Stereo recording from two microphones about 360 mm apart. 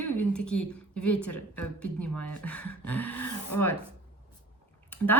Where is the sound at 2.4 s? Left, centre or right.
Centre.